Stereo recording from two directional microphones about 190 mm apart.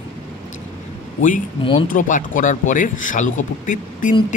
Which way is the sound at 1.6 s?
30° left (ahead or behind).